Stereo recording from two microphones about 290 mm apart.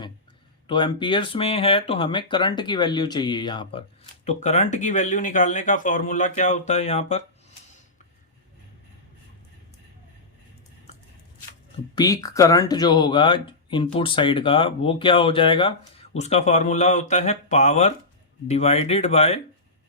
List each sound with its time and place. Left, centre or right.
0.7 s speech: centre
11.9 s speech: centre